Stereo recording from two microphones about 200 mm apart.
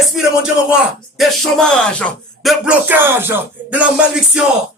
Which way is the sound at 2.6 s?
10° right (ahead or behind).